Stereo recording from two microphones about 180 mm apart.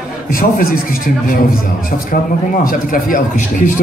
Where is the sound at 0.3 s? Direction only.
55° left (ahead or behind).